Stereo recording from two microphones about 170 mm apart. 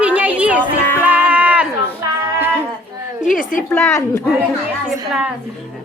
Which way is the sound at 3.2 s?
50° left (ahead or behind).